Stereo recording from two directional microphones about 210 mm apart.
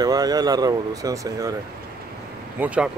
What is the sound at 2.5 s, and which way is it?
Speech, 5° right (ahead or behind).